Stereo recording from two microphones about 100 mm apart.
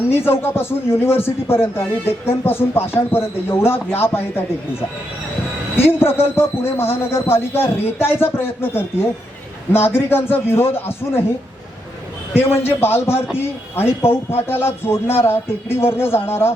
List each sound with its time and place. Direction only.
0.1 s a man's voice: 20° left (ahead or behind)
5.7 s a man's voice: 20° left (ahead or behind)
12.3 s a man's voice: 20° left (ahead or behind)